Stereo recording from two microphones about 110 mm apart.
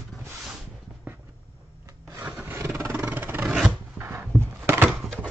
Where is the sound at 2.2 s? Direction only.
15° right (ahead or behind).